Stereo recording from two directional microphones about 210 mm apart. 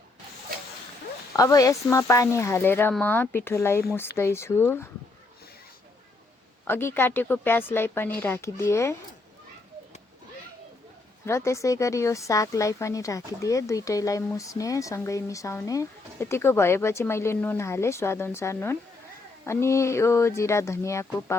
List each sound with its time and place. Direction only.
1.4 s a woman's voice: 15° left (ahead or behind)
6.7 s a woman's voice: 10° left (ahead or behind)
11.3 s a woman's voice: 15° left (ahead or behind)